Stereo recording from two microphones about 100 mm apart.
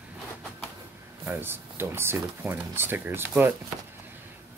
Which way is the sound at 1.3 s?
25° right (ahead or behind).